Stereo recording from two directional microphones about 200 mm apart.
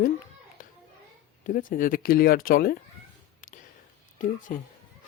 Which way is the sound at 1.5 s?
45° left (ahead or behind).